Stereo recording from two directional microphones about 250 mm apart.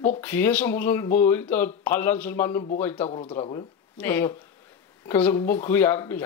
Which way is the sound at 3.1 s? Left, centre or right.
Left.